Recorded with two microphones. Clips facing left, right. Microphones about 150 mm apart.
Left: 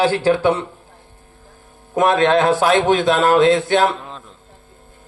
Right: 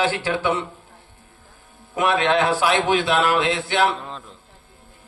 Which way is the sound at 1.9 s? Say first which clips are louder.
Left 5 dB; 45° left (ahead or behind).